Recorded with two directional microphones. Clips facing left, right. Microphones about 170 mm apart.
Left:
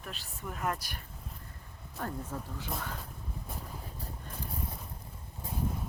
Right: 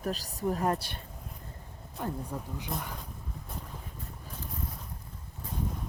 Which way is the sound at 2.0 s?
15° right (ahead or behind).